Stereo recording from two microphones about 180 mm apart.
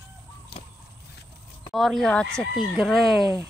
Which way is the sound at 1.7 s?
Centre (ahead or behind).